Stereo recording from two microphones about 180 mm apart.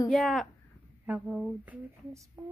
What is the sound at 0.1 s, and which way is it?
A woman's voice, centre (ahead or behind).